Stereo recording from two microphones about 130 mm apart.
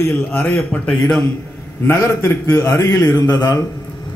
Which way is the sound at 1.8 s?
15° left (ahead or behind).